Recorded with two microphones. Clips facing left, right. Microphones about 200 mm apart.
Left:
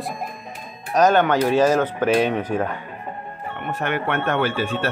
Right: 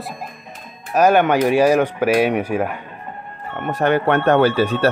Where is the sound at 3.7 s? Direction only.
35° right (ahead or behind).